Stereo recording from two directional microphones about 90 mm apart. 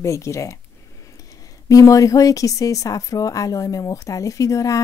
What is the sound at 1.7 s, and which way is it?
Speech, 40° left (ahead or behind).